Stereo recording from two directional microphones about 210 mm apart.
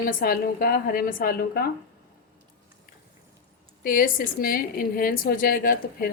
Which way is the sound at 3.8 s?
45° left (ahead or behind).